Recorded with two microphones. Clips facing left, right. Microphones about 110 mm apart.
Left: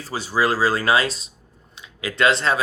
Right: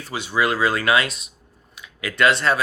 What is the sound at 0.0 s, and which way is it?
Speech, 35° left (ahead or behind).